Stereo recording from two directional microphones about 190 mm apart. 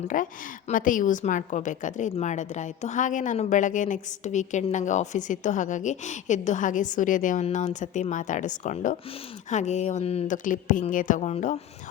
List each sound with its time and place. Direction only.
0.1 s a woman's voice: 45° left (ahead or behind)